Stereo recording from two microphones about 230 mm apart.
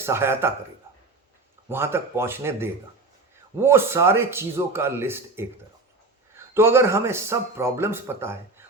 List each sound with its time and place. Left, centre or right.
0.0 s speech: centre
1.7 s speech: centre